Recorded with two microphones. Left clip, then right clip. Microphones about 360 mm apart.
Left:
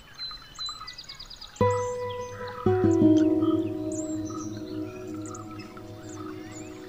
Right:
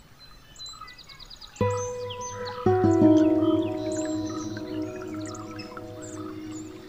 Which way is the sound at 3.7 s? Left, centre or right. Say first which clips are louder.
Right 3 dB; right.